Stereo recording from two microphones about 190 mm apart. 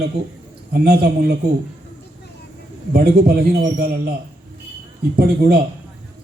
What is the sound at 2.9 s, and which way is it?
A man's voice, 55° right (ahead or behind).